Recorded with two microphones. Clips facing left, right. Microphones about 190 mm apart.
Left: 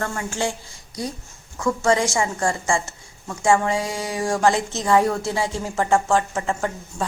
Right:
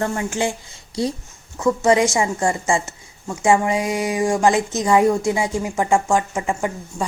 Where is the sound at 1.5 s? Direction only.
20° right (ahead or behind).